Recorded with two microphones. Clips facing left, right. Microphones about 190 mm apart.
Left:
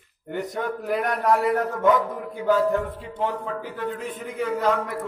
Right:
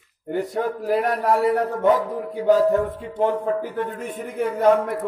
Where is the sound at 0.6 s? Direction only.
30° right (ahead or behind).